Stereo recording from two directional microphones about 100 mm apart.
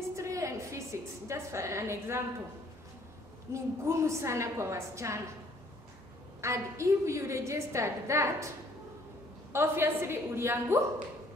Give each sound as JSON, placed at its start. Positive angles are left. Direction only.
{"t": 0.1, "sound": "a sound", "side_deg": -30}
{"t": 3.5, "sound": "a woman's voice", "side_deg": -25}
{"t": 6.4, "sound": "a woman's voice", "side_deg": -30}
{"t": 9.5, "sound": "a woman's voice", "side_deg": -25}